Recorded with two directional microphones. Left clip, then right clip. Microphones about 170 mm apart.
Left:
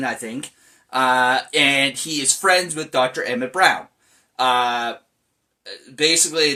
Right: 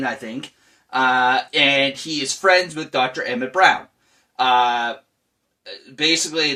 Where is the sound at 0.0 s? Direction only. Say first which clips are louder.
Even; 15° left (ahead or behind).